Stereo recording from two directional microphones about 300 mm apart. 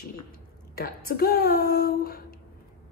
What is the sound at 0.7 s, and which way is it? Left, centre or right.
A woman's voice, left.